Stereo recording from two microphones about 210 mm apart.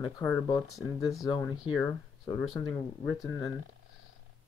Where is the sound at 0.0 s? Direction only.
15° left (ahead or behind).